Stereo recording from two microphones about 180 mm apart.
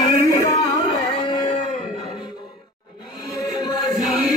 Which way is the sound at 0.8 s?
30° left (ahead or behind).